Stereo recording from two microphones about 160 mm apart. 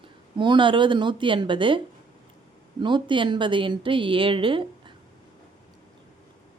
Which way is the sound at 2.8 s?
30° right (ahead or behind).